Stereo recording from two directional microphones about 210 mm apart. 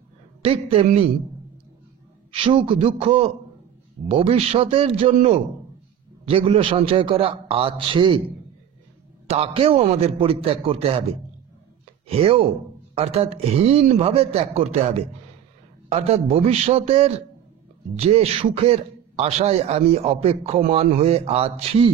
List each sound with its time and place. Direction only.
0.4 s a man's voice: 25° right (ahead or behind)
2.3 s a man's voice: 25° right (ahead or behind)
9.3 s a man's voice: 30° right (ahead or behind)
12.1 s a man's voice: 30° right (ahead or behind)